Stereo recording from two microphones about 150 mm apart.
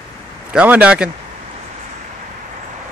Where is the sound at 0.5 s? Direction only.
10° right (ahead or behind).